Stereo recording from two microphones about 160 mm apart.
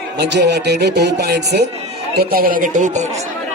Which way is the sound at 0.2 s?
90° right.